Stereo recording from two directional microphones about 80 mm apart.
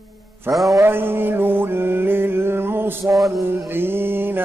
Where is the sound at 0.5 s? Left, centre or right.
Right.